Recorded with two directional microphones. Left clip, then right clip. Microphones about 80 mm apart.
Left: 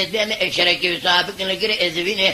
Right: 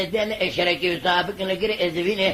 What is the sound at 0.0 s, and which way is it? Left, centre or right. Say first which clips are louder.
Speech: left 3 dB; left.